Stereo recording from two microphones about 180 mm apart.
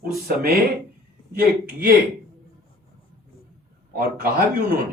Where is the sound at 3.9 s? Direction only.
55° right (ahead or behind).